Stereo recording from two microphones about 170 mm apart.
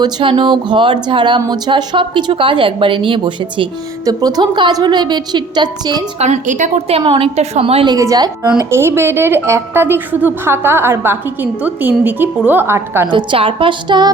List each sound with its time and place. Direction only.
0.0 s a woman's voice: 30° right (ahead or behind)
6.1 s a woman's voice: 40° right (ahead or behind)
7.0 s a woman's voice: 30° right (ahead or behind)
7.9 s a woman's voice: 20° right (ahead or behind)
13.1 s a woman's voice: 30° right (ahead or behind)